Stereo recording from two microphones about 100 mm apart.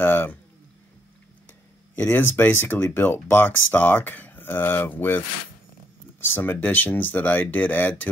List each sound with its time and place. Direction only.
0.0 s a sound: 15° left (ahead or behind)
2.0 s speech: 15° left (ahead or behind)
6.2 s speech: 20° left (ahead or behind)